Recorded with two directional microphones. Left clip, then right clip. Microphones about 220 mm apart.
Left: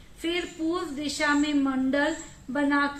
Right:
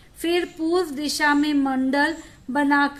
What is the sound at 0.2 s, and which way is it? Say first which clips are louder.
A woman's voice: right 6 dB; 55° right (ahead or behind).